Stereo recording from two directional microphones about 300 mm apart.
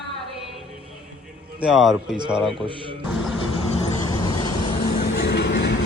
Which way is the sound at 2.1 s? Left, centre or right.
Centre.